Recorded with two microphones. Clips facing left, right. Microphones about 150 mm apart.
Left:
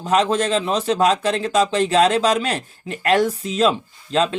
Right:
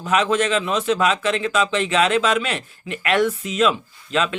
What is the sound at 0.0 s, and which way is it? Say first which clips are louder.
Speech: left 1 dB; 35° left (ahead or behind).